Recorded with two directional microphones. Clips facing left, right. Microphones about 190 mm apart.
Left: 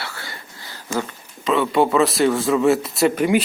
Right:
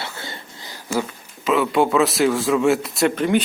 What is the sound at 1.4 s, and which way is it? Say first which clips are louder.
Speech: even; centre (ahead or behind).